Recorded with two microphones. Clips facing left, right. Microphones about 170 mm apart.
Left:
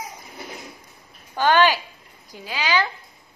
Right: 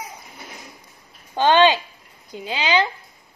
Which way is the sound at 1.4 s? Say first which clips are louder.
Right 3 dB; 20° right (ahead or behind).